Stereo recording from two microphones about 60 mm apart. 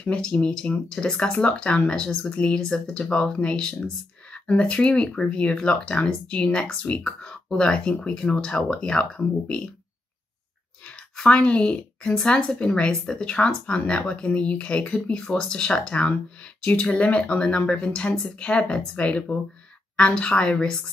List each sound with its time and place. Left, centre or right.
0.0 s speech: centre
10.9 s a woman's voice: centre